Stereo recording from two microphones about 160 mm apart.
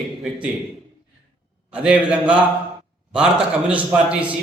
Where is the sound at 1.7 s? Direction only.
5° right (ahead or behind).